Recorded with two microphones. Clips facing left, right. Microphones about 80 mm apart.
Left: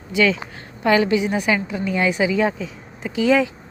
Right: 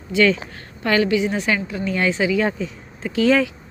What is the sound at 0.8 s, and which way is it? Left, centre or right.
A woman's voice, centre.